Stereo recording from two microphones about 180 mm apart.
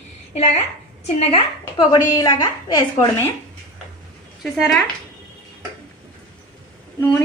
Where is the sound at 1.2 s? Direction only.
35° left (ahead or behind).